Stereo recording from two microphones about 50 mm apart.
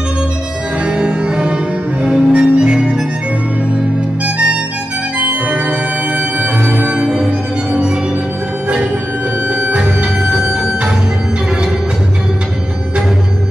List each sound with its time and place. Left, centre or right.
0.8 s music: centre
5.2 s music: right
6.9 s music: right
9.5 s music: right
9.8 s music: centre